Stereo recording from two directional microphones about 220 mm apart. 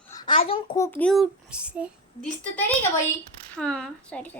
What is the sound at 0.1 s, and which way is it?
Speech, 20° left (ahead or behind).